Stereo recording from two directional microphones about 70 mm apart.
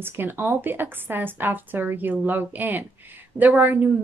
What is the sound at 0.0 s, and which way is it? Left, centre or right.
A woman's voice, right.